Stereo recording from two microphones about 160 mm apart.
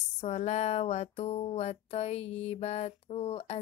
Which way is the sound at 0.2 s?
45° left (ahead or behind).